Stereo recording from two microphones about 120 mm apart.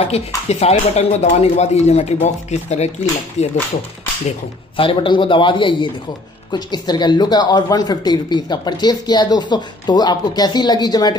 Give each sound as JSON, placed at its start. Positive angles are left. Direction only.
{"t": 0.1, "sound": "speech", "side_deg": 60}
{"t": 4.7, "sound": "a man's voice", "side_deg": 45}